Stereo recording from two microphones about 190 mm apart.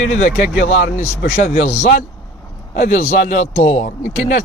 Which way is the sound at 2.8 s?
45° left (ahead or behind).